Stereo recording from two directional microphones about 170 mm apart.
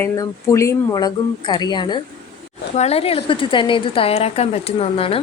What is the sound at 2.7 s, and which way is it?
Speech, 40° left (ahead or behind).